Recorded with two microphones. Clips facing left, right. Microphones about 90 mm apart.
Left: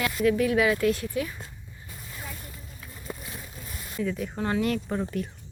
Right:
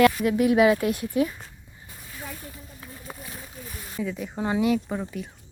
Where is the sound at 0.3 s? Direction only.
20° right (ahead or behind).